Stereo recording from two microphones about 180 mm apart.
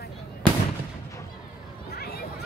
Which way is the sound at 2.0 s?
60° left (ahead or behind).